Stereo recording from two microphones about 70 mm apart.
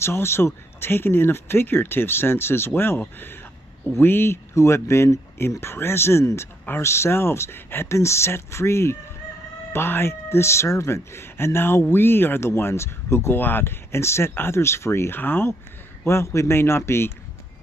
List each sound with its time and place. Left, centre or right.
0.0 s speech: left
16.0 s speech: left